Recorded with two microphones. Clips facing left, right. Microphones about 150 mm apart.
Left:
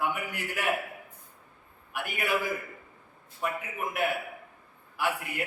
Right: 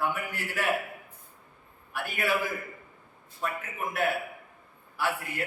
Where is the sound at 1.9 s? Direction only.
15° left (ahead or behind).